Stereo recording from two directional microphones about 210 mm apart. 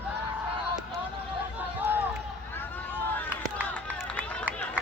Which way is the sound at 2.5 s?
10° left (ahead or behind).